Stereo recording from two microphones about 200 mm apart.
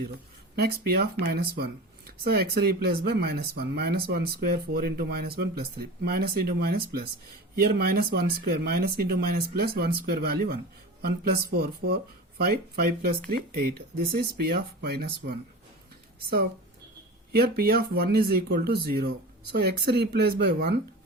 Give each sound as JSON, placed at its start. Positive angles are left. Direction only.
{"t": 0.5, "sound": "speech", "side_deg": -50}
{"t": 17.3, "sound": "speech", "side_deg": -50}